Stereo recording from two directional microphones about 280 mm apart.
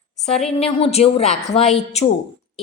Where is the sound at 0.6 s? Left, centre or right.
Left.